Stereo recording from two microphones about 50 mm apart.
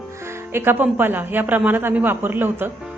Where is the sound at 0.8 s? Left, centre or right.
Right.